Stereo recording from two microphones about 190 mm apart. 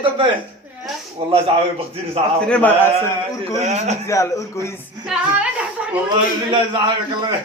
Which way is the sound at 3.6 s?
35° right (ahead or behind).